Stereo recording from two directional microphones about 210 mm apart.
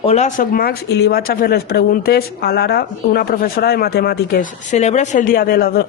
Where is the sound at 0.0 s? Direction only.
30° left (ahead or behind).